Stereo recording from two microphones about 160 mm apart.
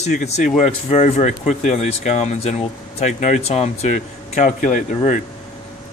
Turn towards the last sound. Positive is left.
turn(degrees=55)  # may be behind; listen again after turning